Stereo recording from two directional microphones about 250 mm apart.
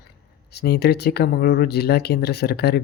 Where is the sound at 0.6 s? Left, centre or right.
Left.